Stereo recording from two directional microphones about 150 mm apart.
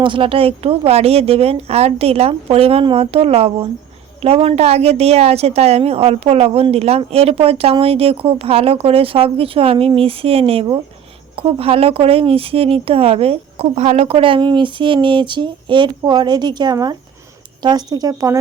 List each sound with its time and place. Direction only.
0.0 s a woman's voice: 35° right (ahead or behind)